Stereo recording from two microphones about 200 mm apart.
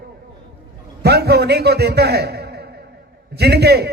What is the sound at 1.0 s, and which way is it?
A man's voice, 55° right (ahead or behind).